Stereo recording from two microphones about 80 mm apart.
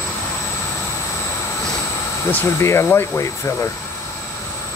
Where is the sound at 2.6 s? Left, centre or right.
Left.